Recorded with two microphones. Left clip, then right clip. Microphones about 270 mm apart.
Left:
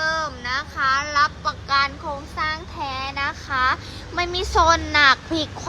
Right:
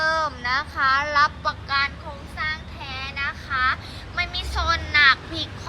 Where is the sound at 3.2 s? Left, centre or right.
Centre.